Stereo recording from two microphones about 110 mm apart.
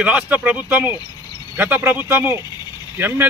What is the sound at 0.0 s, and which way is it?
A man's voice, 10° right (ahead or behind).